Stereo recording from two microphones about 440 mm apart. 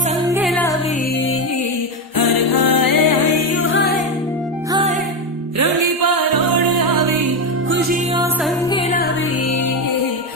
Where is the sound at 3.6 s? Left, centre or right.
Left.